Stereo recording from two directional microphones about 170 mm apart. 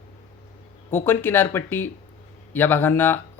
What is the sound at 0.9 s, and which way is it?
Speech, 15° left (ahead or behind).